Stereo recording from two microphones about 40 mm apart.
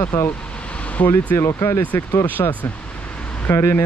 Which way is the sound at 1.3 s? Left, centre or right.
Left.